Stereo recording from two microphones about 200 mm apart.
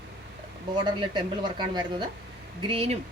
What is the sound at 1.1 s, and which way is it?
Speech, 25° right (ahead or behind).